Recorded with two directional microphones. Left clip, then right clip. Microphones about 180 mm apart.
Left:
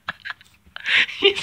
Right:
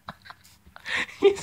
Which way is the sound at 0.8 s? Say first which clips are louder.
Left 5 dB; 20° right (ahead or behind).